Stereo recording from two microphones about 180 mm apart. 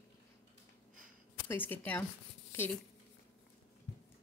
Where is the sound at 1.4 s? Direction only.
10° left (ahead or behind).